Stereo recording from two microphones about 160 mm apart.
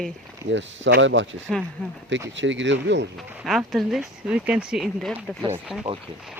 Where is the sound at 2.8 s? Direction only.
90° right.